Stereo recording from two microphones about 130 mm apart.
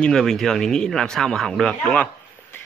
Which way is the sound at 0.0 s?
5° left (ahead or behind).